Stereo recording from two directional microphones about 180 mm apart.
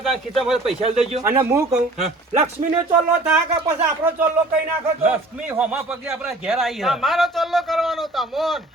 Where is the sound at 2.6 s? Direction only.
40° right (ahead or behind).